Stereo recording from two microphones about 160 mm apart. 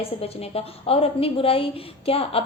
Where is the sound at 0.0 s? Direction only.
40° left (ahead or behind).